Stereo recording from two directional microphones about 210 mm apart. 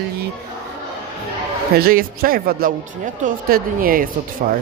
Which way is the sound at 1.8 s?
45° right (ahead or behind).